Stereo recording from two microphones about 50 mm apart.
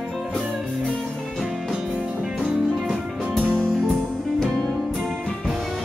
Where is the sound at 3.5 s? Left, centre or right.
Centre.